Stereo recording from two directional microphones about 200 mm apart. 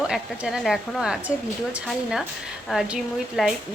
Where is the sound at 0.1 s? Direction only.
5° right (ahead or behind).